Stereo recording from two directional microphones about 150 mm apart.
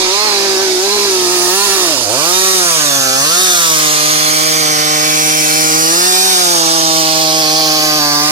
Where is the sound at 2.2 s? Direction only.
40° right (ahead or behind).